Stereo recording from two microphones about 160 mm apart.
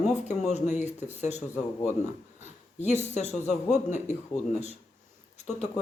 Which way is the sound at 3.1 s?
45° left (ahead or behind).